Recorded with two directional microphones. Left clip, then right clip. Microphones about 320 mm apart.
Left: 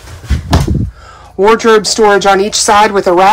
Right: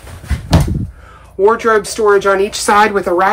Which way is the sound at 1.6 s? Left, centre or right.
Centre.